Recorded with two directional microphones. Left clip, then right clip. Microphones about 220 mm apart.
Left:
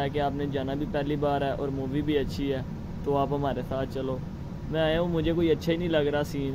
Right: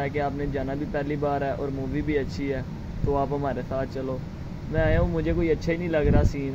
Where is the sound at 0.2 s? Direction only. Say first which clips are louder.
Right 1 dB; centre (ahead or behind).